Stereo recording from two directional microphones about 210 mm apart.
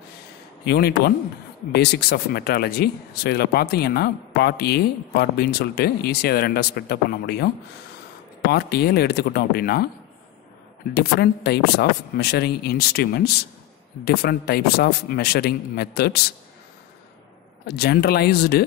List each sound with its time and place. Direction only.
0.7 s speech: 50° left (ahead or behind)
8.5 s speech: 50° left (ahead or behind)
10.9 s speech: 50° left (ahead or behind)
17.6 s speech: 50° left (ahead or behind)